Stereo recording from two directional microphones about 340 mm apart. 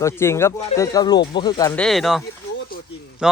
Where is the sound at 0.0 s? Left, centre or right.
Centre.